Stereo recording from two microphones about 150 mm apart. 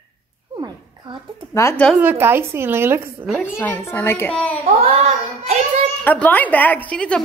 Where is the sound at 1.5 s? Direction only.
20° left (ahead or behind).